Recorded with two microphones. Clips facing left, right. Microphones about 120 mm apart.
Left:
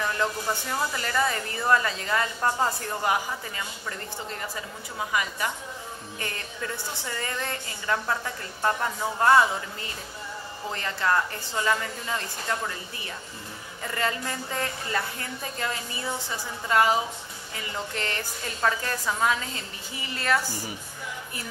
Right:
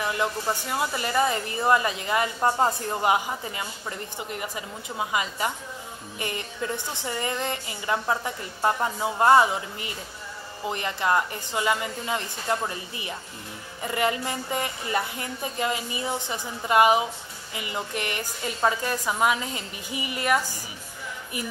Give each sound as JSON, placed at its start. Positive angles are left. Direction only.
{"t": 0.0, "sound": "a woman's voice", "side_deg": -10}